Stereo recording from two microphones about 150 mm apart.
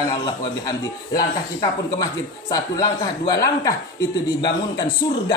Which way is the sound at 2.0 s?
25° left (ahead or behind).